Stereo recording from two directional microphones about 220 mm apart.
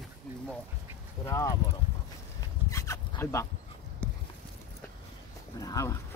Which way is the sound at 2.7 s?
15° left (ahead or behind).